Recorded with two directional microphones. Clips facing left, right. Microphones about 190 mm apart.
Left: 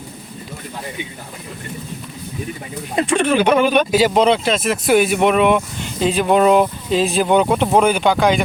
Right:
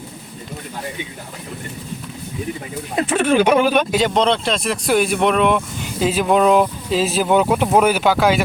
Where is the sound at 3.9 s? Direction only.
5° left (ahead or behind).